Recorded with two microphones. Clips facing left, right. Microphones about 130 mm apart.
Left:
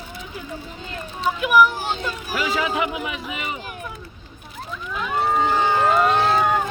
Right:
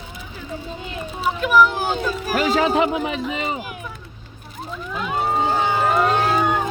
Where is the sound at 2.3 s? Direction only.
45° right (ahead or behind).